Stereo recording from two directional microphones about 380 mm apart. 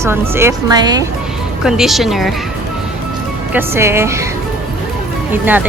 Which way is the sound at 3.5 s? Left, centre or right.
Centre.